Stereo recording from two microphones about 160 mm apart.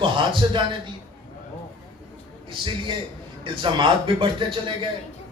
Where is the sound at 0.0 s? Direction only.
30° right (ahead or behind).